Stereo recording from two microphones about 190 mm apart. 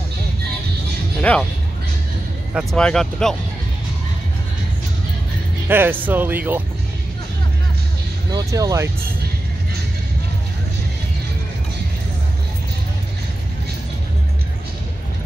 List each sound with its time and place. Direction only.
1.3 s speech: 10° left (ahead or behind)
2.5 s speech: 5° left (ahead or behind)
5.7 s speech: 10° right (ahead or behind)
8.3 s speech: 20° right (ahead or behind)